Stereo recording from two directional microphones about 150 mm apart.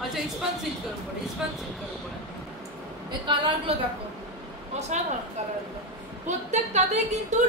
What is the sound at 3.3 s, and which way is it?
Speech, 35° right (ahead or behind).